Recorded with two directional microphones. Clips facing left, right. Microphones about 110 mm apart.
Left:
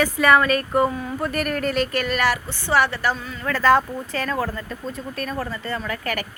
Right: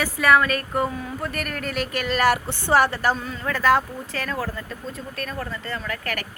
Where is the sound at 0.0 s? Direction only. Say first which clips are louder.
Left 2 dB; 5° right (ahead or behind).